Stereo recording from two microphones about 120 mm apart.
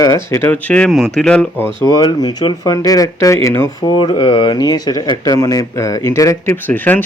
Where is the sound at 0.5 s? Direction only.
10° left (ahead or behind).